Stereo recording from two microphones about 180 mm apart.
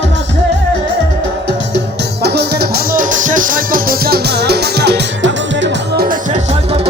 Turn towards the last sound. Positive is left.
turn(degrees=-75)  # may be behind; listen again after turning